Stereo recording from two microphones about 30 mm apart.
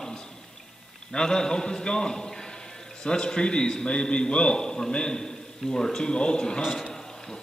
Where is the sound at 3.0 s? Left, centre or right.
Left.